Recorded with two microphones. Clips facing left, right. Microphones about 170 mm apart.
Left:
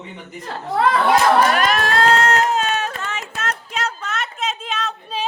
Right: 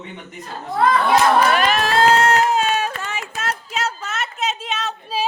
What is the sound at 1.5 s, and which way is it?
Run, centre (ahead or behind).